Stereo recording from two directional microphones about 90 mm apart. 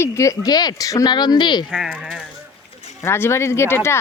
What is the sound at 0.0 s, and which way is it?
Speech, 35° left (ahead or behind).